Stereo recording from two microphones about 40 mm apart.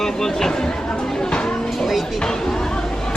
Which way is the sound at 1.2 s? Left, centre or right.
Left.